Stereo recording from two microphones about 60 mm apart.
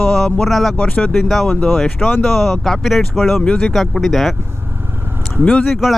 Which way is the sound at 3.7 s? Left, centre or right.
Centre.